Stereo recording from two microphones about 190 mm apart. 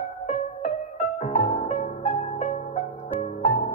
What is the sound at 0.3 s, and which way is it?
Music, 40° left (ahead or behind).